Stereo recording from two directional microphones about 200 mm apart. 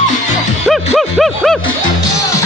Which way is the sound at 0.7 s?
Centre (ahead or behind).